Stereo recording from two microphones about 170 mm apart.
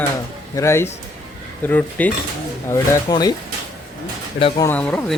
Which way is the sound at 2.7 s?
25° left (ahead or behind).